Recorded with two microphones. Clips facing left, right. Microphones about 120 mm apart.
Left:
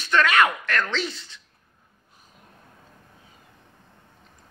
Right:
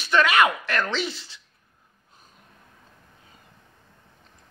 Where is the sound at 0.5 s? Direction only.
25° right (ahead or behind).